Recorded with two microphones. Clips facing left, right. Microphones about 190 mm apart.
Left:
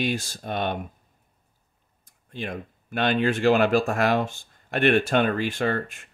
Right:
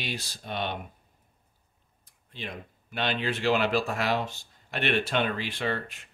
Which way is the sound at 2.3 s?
50° left (ahead or behind).